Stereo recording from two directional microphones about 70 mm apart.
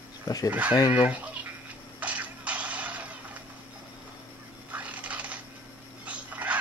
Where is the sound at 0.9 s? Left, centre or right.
Right.